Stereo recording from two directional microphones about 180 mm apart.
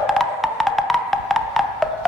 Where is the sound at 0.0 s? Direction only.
Centre (ahead or behind).